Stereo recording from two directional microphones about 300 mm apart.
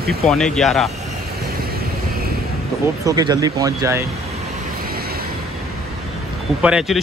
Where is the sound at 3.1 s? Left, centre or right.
Centre.